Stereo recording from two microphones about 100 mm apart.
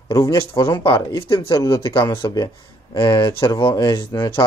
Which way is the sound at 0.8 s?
55° left (ahead or behind).